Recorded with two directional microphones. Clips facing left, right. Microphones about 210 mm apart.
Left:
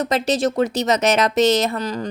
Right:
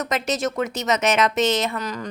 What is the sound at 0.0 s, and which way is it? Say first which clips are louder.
Speech: left 5 dB; 30° left (ahead or behind).